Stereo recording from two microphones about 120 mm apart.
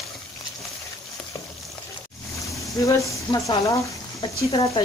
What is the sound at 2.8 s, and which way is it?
Speech, 30° left (ahead or behind).